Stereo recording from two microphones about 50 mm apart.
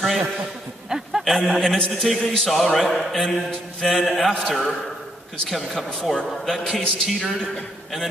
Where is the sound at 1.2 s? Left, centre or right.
Centre.